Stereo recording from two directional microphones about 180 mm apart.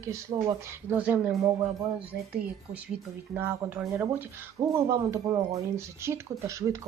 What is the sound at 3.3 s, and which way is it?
Speech, 10° right (ahead or behind).